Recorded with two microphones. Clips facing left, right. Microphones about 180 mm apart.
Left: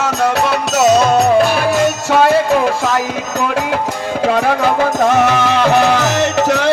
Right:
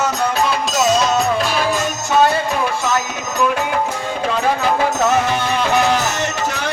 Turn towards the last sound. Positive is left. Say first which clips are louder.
# left 8 dB
turn(degrees=80)